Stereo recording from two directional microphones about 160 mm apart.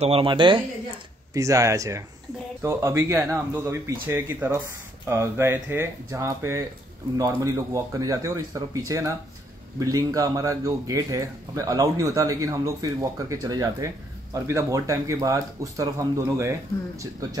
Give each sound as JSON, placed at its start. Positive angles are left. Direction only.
{"t": 0.0, "sound": "speech", "side_deg": -35}
{"t": 1.3, "sound": "speech", "side_deg": -20}